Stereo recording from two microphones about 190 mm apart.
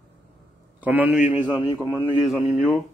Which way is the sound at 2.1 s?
Centre (ahead or behind).